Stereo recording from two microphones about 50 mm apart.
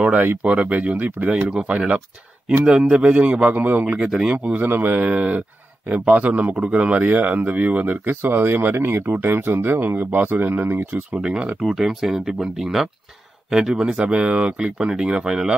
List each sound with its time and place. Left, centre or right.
0.0 s speech: right
3.5 s speech: right
3.8 s speech: right
4.6 s speech: right
11.6 s speech: centre